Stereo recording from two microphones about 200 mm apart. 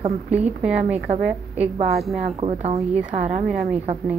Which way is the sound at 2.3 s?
30° right (ahead or behind).